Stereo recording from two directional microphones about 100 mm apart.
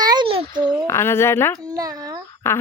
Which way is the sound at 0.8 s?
25° left (ahead or behind).